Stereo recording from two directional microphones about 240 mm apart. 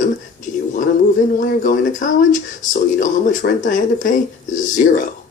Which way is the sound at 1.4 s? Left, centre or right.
Left.